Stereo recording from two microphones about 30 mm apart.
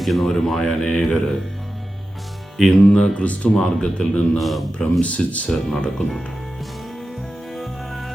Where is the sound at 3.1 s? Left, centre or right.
Left.